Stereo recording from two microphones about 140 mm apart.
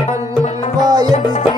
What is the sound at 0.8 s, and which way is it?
Music, 30° right (ahead or behind).